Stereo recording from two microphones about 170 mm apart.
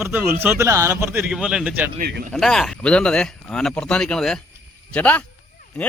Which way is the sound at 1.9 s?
60° right (ahead or behind).